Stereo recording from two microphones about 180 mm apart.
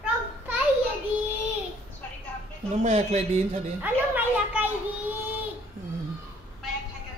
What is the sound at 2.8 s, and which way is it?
Speech, 40° right (ahead or behind).